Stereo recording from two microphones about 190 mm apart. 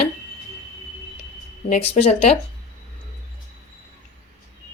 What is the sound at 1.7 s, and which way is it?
Speech, 35° left (ahead or behind).